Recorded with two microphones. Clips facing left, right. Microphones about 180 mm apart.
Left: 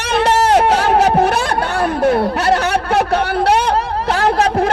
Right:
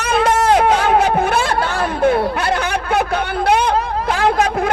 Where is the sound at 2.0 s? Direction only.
40° left (ahead or behind).